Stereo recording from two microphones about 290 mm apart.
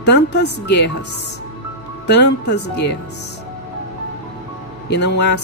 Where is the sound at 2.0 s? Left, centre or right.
Left.